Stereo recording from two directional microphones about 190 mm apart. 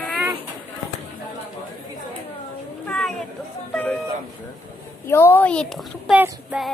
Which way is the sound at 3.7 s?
5° left (ahead or behind).